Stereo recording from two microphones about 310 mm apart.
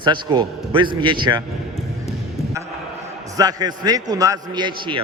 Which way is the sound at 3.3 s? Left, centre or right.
Centre.